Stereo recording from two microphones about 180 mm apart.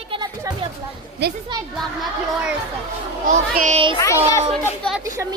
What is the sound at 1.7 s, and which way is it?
Speech, centre (ahead or behind).